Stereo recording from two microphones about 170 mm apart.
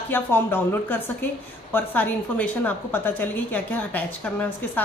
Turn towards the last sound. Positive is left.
turn(degrees=10)  # may be behind; listen again after turning